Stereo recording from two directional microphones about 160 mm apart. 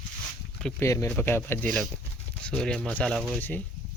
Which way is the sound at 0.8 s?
20° left (ahead or behind).